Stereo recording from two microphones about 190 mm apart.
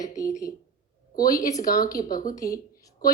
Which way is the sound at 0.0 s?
15° left (ahead or behind).